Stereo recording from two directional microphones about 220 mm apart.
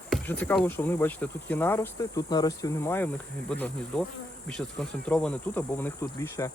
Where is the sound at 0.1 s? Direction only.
5° left (ahead or behind).